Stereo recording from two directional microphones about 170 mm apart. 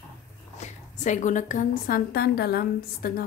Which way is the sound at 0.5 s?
45° left (ahead or behind).